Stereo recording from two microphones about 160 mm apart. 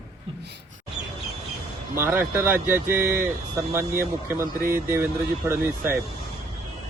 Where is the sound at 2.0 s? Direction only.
15° right (ahead or behind).